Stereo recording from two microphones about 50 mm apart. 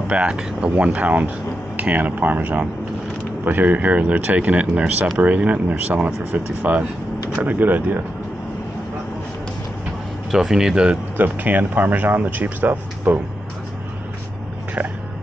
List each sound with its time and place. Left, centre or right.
0.1 s speech: right
0.7 s speech: right
10.3 s speech: centre
11.1 s speech: right